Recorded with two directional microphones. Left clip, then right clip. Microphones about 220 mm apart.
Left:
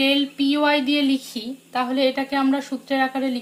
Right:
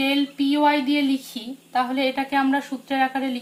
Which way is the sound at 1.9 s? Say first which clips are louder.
Left 1 dB; 40° left (ahead or behind).